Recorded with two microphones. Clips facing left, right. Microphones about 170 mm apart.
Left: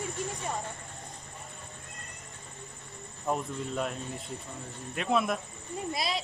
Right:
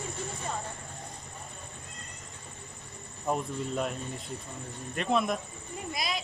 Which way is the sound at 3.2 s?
Centre (ahead or behind).